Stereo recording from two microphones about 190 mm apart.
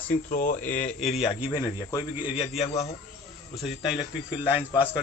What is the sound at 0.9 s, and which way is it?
Speech, centre (ahead or behind).